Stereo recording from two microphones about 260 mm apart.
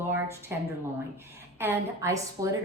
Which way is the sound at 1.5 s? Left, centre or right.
Centre.